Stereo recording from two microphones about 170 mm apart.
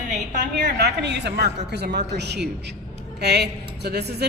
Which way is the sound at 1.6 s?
75° right (ahead or behind).